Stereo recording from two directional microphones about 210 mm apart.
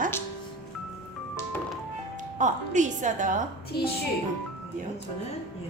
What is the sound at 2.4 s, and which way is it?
A woman's voice, 35° right (ahead or behind).